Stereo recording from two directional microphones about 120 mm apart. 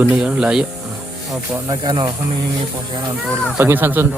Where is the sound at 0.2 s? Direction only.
10° right (ahead or behind).